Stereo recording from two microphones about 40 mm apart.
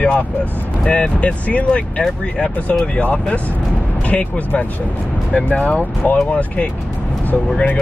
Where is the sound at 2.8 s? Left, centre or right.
Left.